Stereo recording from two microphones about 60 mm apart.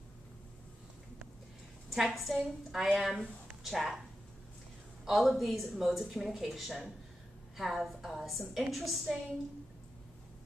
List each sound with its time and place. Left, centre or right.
1.9 s a woman's voice: centre
5.0 s a man's voice: centre